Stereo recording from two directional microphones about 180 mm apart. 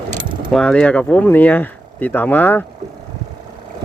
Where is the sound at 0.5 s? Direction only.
5° left (ahead or behind).